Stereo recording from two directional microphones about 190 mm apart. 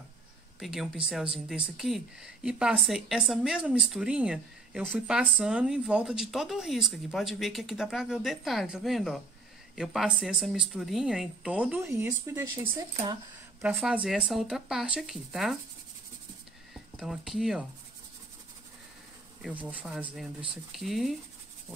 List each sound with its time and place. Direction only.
0.6 s speech: centre (ahead or behind)
13.7 s speech: 5° right (ahead or behind)
16.7 s speech: 5° right (ahead or behind)
19.4 s speech: 10° right (ahead or behind)